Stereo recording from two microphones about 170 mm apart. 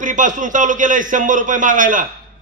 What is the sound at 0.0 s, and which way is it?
Speech, 50° right (ahead or behind).